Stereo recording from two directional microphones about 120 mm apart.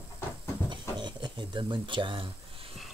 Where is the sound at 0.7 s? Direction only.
40° right (ahead or behind).